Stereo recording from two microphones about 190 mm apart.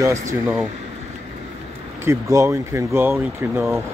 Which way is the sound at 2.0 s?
15° right (ahead or behind).